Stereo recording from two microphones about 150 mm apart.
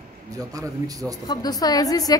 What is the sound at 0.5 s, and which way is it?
Speech, 20° right (ahead or behind).